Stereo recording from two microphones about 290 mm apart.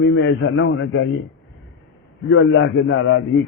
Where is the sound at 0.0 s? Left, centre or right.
Left.